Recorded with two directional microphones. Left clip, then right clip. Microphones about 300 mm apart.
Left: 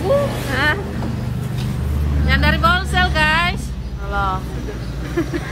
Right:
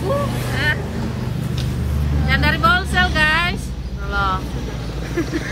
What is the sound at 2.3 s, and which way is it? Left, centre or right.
Speech, centre.